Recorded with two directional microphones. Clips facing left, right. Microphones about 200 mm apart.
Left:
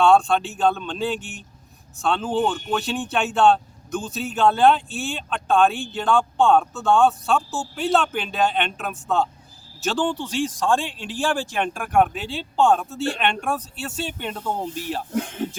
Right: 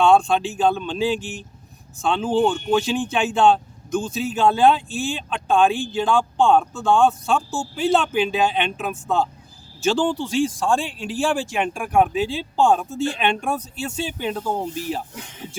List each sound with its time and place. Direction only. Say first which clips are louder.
0.1 s speech: right 1 dB; 5° right (ahead or behind)
15.1 s speech: left 13 dB; 60° left (ahead or behind)